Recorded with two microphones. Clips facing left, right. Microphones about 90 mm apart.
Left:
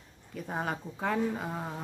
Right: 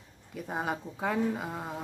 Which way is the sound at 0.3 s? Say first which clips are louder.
Right 1 dB; 5° right (ahead or behind).